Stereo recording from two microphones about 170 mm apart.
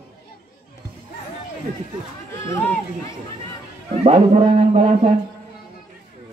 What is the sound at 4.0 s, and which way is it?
A man's voice, 35° right (ahead or behind).